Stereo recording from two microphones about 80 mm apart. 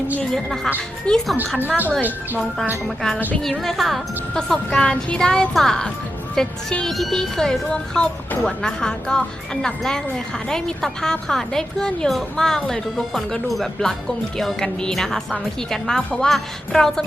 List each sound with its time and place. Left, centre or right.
0.2 s a woman's voice: centre
1.5 s speech: right
2.8 s a woman's voice: centre